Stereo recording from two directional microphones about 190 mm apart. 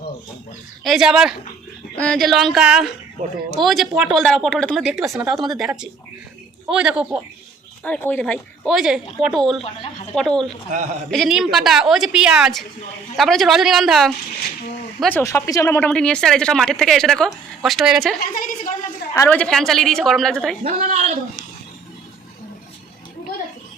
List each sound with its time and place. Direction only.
0.9 s speech: centre (ahead or behind)
7.9 s speech: 10° left (ahead or behind)
15.0 s speech: 10° left (ahead or behind)
18.3 s a sound: 45° left (ahead or behind)
19.1 s speech: 10° left (ahead or behind)
20.7 s speech: 40° right (ahead or behind)